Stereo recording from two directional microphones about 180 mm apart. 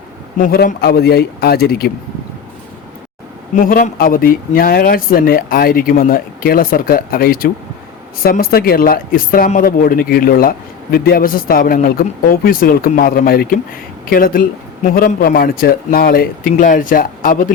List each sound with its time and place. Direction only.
0.3 s a man's voice: 50° left (ahead or behind)
3.6 s speech: 50° left (ahead or behind)